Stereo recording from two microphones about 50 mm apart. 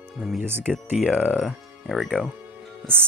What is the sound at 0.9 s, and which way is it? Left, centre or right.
Speech, centre.